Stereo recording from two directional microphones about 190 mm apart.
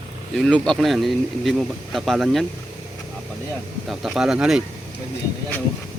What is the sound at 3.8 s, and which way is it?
Speech, centre (ahead or behind).